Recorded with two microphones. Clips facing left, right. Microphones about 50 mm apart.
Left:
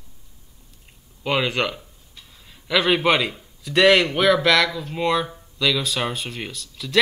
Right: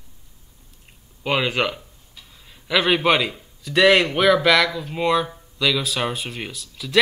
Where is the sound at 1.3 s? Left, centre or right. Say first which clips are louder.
Right 1 dB; centre.